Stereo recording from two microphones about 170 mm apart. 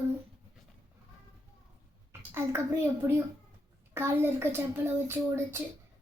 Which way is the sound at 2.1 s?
15° right (ahead or behind).